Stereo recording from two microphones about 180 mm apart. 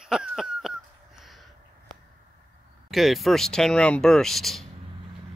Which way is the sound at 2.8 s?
Centre (ahead or behind).